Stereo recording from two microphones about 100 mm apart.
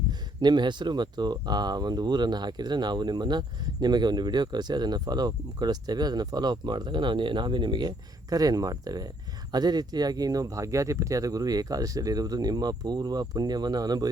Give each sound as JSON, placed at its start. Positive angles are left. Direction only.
{"t": 0.1, "sound": "speech", "side_deg": -45}